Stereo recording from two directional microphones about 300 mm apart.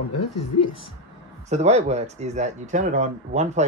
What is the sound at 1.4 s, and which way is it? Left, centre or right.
Speech, right.